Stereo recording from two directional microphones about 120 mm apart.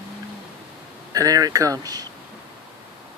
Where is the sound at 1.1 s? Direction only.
30° right (ahead or behind).